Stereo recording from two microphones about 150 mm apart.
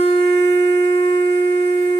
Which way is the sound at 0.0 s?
40° left (ahead or behind).